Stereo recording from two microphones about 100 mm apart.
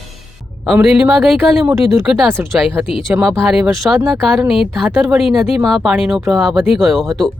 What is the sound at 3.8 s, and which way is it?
Speech, 20° right (ahead or behind).